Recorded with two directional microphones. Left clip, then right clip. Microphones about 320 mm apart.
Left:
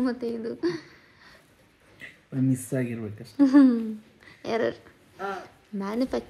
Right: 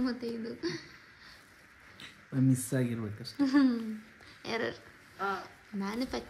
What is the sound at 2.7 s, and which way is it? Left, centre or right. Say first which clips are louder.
Speech: left 4 dB; centre.